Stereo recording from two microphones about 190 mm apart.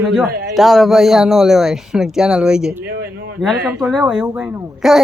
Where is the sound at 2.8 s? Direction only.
55° right (ahead or behind).